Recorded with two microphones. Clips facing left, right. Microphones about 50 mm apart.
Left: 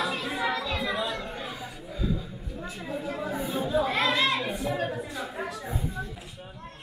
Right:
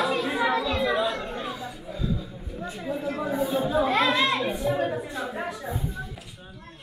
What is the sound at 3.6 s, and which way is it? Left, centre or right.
Children playing, centre.